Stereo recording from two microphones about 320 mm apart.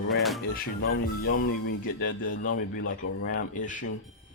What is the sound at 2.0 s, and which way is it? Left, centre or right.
A man's voice, left.